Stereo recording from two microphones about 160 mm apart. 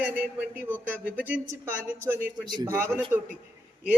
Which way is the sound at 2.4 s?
25° right (ahead or behind).